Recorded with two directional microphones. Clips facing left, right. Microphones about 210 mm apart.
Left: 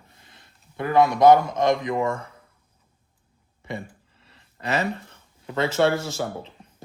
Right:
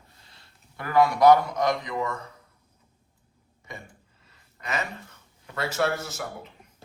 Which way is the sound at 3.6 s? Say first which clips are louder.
Left 9 dB; 30° left (ahead or behind).